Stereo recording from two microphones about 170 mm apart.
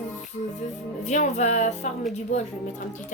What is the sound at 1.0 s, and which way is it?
Speech, 45° left (ahead or behind).